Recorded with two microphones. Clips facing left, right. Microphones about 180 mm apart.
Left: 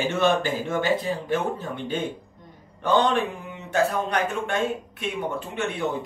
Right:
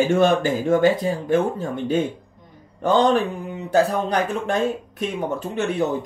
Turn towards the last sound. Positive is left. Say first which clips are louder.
# right 4 dB
turn(degrees=-40)  # may be behind; listen again after turning